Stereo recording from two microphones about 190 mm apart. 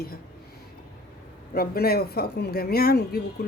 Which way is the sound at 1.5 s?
55° left (ahead or behind).